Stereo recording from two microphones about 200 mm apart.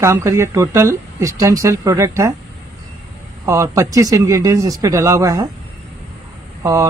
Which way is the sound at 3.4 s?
15° right (ahead or behind).